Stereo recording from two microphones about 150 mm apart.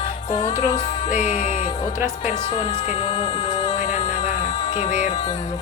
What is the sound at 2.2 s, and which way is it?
Speech, 40° left (ahead or behind).